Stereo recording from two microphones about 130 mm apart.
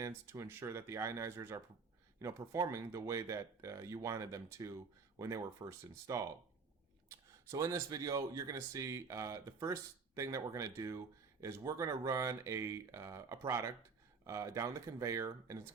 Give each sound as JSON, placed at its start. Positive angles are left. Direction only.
{"t": 0.0, "sound": "speech", "side_deg": -20}